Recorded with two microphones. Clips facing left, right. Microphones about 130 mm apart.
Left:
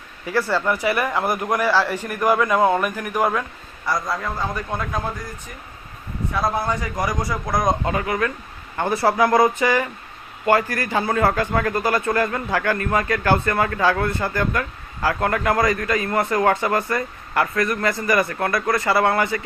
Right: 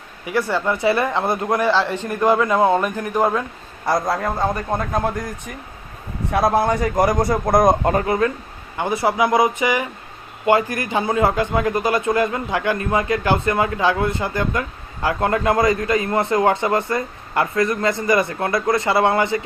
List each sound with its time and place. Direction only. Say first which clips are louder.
0.3 s a man's voice: right 1 dB; 15° right (ahead or behind)
4.4 s a man's voice: right 5 dB; 50° right (ahead or behind)
5.0 s speech: right 6 dB; 70° right (ahead or behind)
6.3 s a man's voice: right 6 dB; 70° right (ahead or behind); by 8.0 s 50° right (ahead or behind)
8.0 s a man's voice: right 4 dB; 30° right (ahead or behind)
8.8 s a man's voice: even; 15° right (ahead or behind)